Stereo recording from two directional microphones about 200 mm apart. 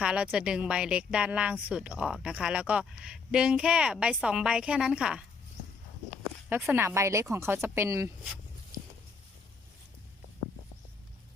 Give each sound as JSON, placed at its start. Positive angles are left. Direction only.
{"t": 0.0, "sound": "speech", "side_deg": -5}
{"t": 6.5, "sound": "speech", "side_deg": -10}
{"t": 8.7, "sound": "a sound", "side_deg": -15}